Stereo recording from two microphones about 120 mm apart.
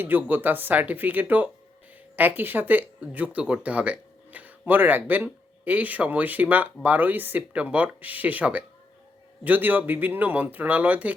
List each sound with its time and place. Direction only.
0.0 s speech: 15° right (ahead or behind)